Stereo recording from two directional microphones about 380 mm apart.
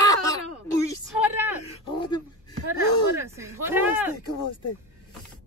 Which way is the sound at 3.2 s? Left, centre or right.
Centre.